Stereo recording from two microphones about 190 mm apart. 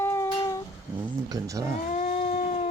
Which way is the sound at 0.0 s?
15° left (ahead or behind).